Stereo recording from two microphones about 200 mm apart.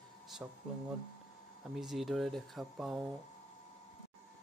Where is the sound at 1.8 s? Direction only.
Centre (ahead or behind).